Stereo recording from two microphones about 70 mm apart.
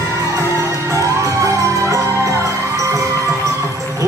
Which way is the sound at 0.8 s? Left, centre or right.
Right.